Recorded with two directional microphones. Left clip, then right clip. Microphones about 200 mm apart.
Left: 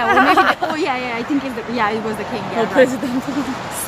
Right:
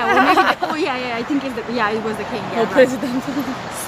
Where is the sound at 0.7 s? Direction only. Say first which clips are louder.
Left 1 dB; 15° left (ahead or behind).